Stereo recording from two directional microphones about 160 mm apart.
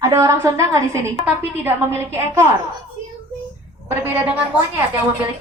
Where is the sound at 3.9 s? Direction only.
15° right (ahead or behind).